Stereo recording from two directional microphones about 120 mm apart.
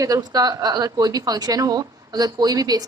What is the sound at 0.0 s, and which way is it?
A woman's voice, 30° right (ahead or behind).